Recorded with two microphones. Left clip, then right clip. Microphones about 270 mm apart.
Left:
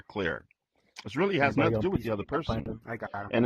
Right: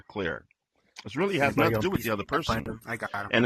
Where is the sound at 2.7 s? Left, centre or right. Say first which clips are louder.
Right 3 dB; right.